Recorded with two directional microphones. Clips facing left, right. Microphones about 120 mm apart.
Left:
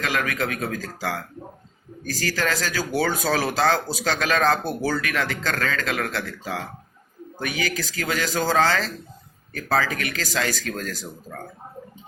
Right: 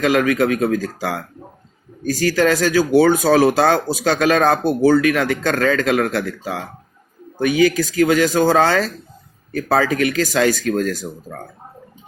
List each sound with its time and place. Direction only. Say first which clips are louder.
0.0 s speech: right 10 dB; 20° right (ahead or behind)